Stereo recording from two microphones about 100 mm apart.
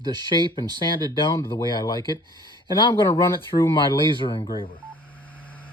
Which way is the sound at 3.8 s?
55° left (ahead or behind).